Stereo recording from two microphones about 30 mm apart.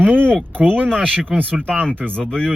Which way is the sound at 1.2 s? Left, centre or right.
Right.